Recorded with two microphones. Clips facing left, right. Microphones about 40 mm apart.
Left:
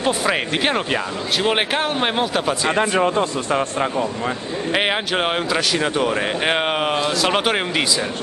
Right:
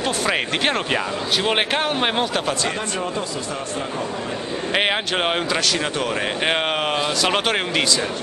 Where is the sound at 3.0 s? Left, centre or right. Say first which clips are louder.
Left 6 dB; left.